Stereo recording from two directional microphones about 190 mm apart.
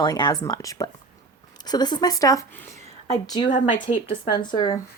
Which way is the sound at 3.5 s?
40° left (ahead or behind).